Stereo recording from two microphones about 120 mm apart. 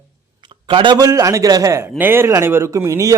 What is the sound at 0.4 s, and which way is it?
A man's voice, 40° right (ahead or behind).